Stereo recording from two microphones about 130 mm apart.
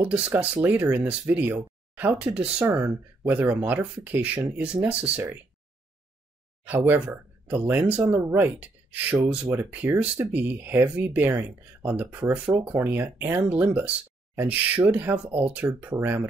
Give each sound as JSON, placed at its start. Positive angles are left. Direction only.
{"t": 0.0, "sound": "speech", "side_deg": -10}
{"t": 6.6, "sound": "speech", "side_deg": -10}